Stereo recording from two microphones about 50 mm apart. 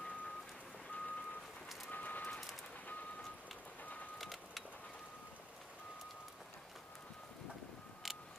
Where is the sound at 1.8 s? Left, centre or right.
Left.